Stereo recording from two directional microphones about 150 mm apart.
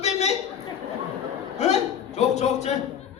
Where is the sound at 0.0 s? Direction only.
45° left (ahead or behind).